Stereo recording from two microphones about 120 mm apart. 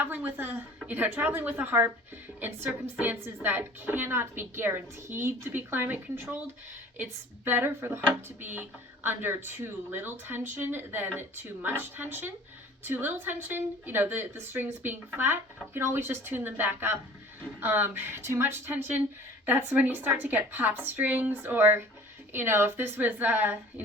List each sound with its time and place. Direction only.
0.0 s a woman's voice: 15° right (ahead or behind)
9.0 s a woman's voice: 15° right (ahead or behind)